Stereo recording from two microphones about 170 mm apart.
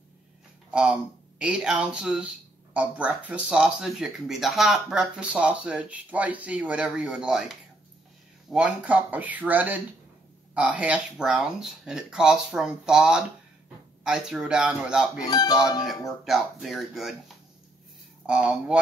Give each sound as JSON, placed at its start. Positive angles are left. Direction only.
{"t": 0.7, "sound": "speech", "side_deg": -5}
{"t": 15.2, "sound": "speech", "side_deg": 25}
{"t": 16.3, "sound": "speech", "side_deg": 0}
{"t": 18.2, "sound": "speech", "side_deg": -5}